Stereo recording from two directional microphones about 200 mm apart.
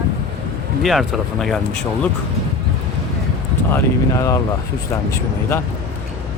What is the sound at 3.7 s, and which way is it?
Speech, 15° left (ahead or behind).